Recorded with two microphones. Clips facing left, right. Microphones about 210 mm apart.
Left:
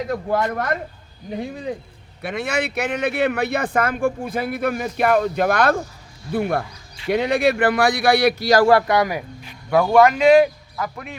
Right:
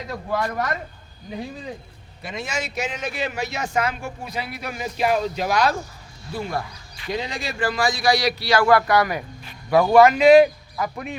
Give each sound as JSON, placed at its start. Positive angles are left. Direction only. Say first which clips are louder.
{"t": 0.1, "sound": "speech", "louder": "left 2 dB", "side_deg": 55}
{"t": 2.2, "sound": "speech", "louder": "left 6 dB", "side_deg": 60}
{"t": 8.6, "sound": "a man's voice", "louder": "left 2 dB", "side_deg": 25}
{"t": 9.9, "sound": "speech", "louder": "right 1 dB", "side_deg": -5}
{"t": 10.8, "sound": "a man's voice", "louder": "right 5 dB", "side_deg": -20}